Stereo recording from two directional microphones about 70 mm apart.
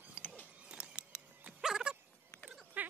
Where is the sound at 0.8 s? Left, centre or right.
Left.